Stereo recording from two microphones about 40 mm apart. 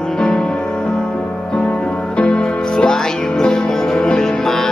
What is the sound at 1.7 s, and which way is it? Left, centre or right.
Music, left.